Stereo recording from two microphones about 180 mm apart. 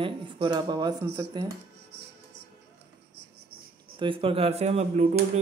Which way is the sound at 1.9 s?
70° right (ahead or behind).